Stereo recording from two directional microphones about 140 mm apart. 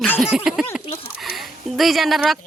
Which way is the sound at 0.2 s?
5° right (ahead or behind).